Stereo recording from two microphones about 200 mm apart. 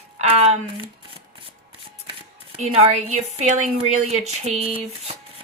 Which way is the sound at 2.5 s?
30° right (ahead or behind).